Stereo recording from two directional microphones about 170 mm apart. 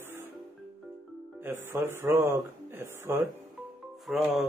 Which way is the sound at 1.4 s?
15° right (ahead or behind).